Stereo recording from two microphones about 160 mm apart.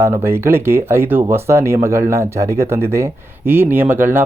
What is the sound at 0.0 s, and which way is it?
Speech, 15° right (ahead or behind).